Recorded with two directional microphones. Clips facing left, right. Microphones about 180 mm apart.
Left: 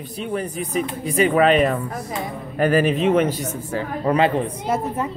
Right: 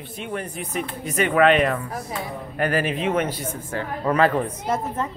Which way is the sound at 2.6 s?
40° left (ahead or behind).